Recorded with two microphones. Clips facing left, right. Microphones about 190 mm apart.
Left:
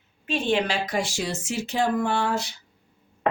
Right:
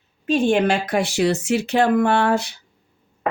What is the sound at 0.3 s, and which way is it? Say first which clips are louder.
Speech: right 7 dB; 45° right (ahead or behind).